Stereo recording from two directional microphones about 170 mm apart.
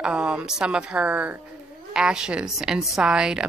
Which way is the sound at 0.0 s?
5° right (ahead or behind).